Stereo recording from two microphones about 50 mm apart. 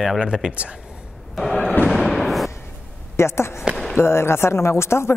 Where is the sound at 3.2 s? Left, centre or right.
Left.